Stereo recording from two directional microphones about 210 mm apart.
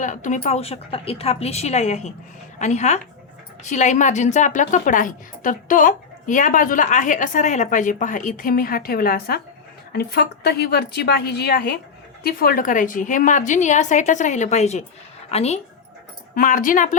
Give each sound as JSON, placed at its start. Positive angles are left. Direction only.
{"t": 0.0, "sound": "a woman's voice", "side_deg": 35}